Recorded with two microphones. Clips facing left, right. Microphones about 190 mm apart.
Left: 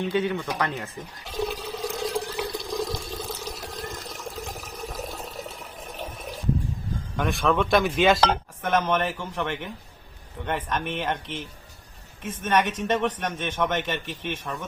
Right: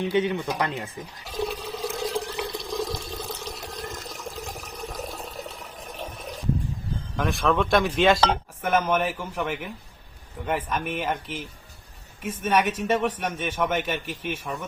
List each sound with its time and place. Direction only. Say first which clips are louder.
0.1 s speech: right 2 dB; 20° right (ahead or behind)
1.2 s water: even; centre (ahead or behind)
7.2 s a man's voice: even; centre (ahead or behind)